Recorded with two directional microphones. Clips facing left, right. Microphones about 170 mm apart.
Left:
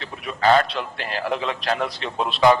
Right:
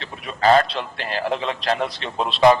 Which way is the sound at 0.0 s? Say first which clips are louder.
Right 1 dB; 30° right (ahead or behind).